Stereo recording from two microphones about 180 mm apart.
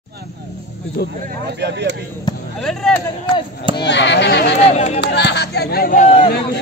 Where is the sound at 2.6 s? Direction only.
Centre (ahead or behind).